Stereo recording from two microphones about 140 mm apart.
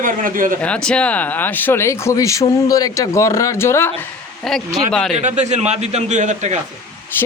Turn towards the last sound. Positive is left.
turn(degrees=15)  # may be behind; listen again after turning